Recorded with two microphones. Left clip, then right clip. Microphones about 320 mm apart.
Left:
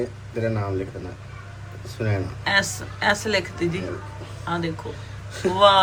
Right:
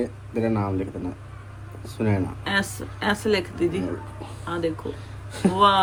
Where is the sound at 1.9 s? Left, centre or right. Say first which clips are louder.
Right 2 dB; right.